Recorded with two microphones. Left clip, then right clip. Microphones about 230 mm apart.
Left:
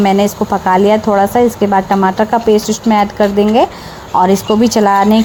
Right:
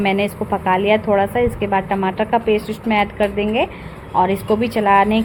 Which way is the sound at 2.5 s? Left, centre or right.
Left.